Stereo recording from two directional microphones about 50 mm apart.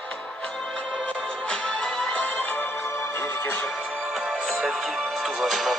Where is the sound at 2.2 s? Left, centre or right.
Left.